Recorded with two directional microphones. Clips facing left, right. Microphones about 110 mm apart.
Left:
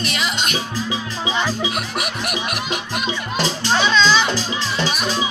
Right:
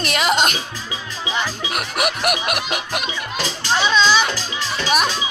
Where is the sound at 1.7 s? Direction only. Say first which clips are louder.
Right 2 dB; 75° right (ahead or behind).